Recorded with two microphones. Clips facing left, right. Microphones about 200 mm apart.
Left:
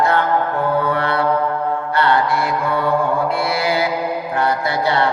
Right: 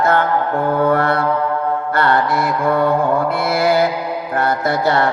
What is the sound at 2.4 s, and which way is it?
Speech, 50° right (ahead or behind).